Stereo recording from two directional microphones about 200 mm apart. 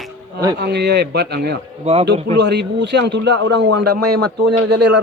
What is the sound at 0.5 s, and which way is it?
A man's voice, 55° right (ahead or behind).